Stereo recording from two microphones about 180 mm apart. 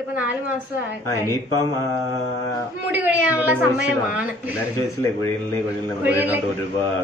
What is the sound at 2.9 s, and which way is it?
A woman's voice, 10° right (ahead or behind).